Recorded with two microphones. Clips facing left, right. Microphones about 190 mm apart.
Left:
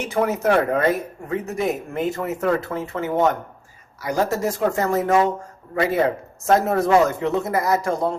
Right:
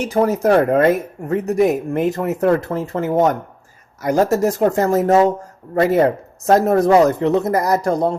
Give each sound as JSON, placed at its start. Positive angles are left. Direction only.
{"t": 0.1, "sound": "speech", "side_deg": -40}
{"t": 0.6, "sound": "speech", "side_deg": -50}